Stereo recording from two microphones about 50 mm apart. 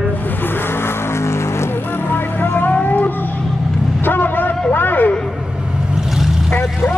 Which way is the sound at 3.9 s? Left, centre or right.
Left.